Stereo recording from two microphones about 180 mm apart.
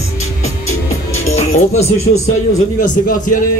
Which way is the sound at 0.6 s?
40° left (ahead or behind).